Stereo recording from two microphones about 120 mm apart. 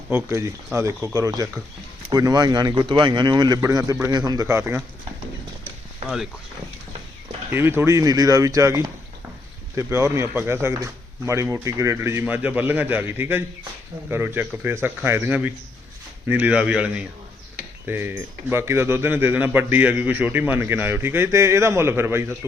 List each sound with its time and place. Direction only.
0.1 s speech: 20° right (ahead or behind)
7.5 s speech: 20° right (ahead or behind)
12.2 s speech: 15° right (ahead or behind)